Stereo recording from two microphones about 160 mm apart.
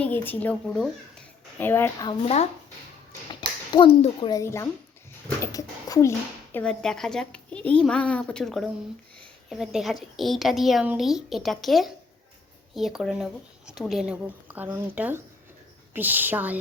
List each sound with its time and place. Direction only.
0.0 s speech: 10° left (ahead or behind)
2.2 s speech: 45° left (ahead or behind)
3.7 s a child's voice: 30° left (ahead or behind)
4.3 s a woman's voice: 20° left (ahead or behind); by 16.6 s 10° right (ahead or behind)